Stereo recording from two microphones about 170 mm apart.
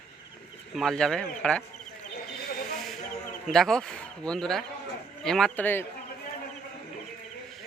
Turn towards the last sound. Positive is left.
turn(degrees=10)  # may be behind; listen again after turning